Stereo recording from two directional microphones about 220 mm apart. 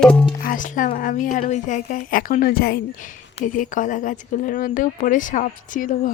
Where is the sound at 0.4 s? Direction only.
35° left (ahead or behind).